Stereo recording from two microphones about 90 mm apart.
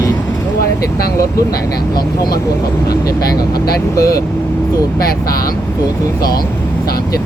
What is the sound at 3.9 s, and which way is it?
Speech, 40° left (ahead or behind).